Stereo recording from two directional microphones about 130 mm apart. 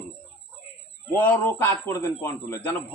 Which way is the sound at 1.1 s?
15° left (ahead or behind).